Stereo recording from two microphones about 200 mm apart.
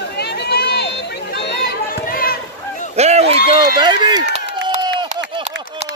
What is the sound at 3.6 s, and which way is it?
Run, 20° right (ahead or behind).